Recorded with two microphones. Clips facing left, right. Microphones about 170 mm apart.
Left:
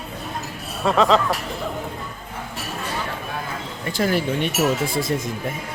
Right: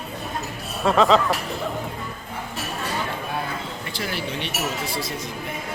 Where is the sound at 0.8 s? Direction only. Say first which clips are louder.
Even; centre (ahead or behind).